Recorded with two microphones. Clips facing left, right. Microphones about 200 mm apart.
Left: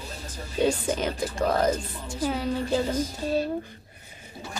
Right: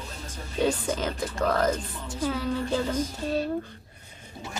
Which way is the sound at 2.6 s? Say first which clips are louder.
Left 4 dB; 30° left (ahead or behind).